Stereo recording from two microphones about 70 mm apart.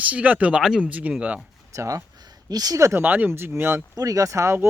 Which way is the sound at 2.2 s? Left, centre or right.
Right.